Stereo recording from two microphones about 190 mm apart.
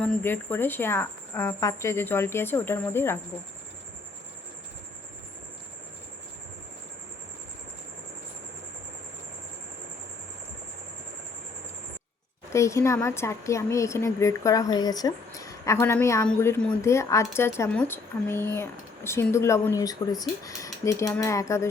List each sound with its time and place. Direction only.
0.0 s a woman's voice: 5° left (ahead or behind)
12.5 s a woman's voice: 15° left (ahead or behind)